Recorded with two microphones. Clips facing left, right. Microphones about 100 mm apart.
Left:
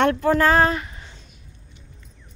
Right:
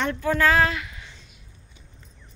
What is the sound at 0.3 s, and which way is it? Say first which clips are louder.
Speech: even; 35° left (ahead or behind).